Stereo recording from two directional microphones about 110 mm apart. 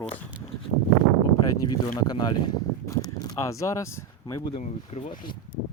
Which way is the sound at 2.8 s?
30° left (ahead or behind).